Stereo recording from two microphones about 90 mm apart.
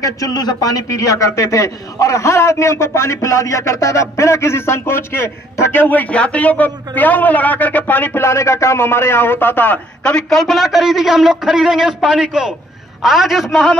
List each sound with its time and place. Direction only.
0.0 s a man's voice: 45° left (ahead or behind); by 9.8 s 20° left (ahead or behind)
10.0 s a man's voice: 5° left (ahead or behind)